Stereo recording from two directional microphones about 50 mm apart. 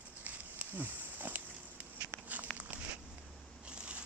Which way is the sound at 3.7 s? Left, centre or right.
Right.